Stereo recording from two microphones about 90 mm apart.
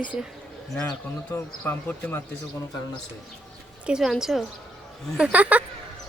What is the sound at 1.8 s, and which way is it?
Speech, 25° left (ahead or behind).